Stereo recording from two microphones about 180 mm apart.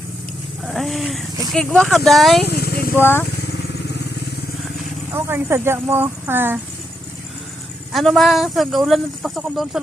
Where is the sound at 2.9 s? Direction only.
10° left (ahead or behind).